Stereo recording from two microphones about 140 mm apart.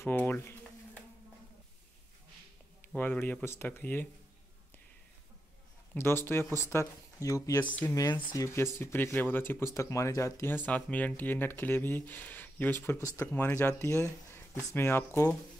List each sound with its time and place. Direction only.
0.0 s a sound: 15° left (ahead or behind)
3.0 s speech: 15° left (ahead or behind)
5.9 s speech: 15° left (ahead or behind)
7.6 s speech: 10° left (ahead or behind)
7.9 s speech: 25° left (ahead or behind)